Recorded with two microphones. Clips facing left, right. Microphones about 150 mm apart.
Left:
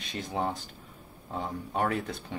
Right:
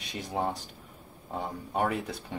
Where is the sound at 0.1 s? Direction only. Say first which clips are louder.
Even; 10° right (ahead or behind).